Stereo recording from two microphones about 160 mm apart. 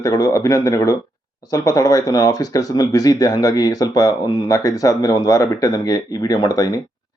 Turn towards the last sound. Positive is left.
turn(degrees=25)  # may be behind; listen again after turning